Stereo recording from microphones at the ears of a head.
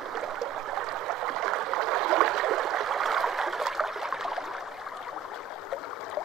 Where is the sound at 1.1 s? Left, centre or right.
Right.